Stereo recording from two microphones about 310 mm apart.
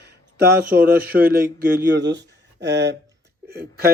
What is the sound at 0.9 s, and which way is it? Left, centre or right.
A man's voice, right.